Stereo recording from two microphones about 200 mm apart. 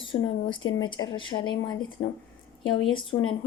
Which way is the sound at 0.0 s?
25° left (ahead or behind).